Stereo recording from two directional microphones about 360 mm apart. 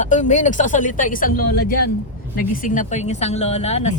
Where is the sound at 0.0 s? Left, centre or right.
Centre.